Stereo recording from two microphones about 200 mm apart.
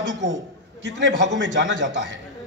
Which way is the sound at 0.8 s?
65° right (ahead or behind).